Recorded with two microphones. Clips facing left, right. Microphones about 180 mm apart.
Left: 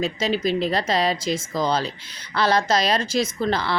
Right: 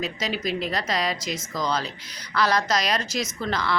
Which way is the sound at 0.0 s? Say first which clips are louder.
Left 5 dB; 30° left (ahead or behind).